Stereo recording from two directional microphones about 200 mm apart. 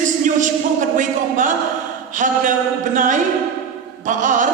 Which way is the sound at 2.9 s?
40° right (ahead or behind).